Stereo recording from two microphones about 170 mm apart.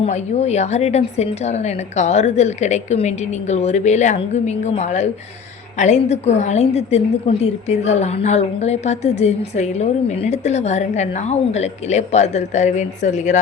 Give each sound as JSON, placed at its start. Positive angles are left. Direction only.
{"t": 0.0, "sound": "a woman's voice", "side_deg": 40}